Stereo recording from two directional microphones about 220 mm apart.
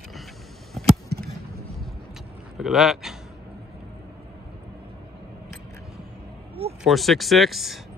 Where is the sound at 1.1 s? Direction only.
45° right (ahead or behind).